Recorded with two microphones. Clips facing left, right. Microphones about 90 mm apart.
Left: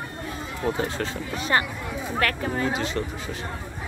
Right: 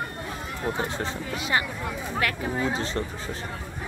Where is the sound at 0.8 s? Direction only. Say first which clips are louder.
Left 1 dB; 20° right (ahead or behind).